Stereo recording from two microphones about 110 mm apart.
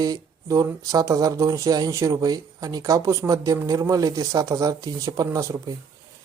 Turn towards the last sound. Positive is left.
turn(degrees=-30)  # may be behind; listen again after turning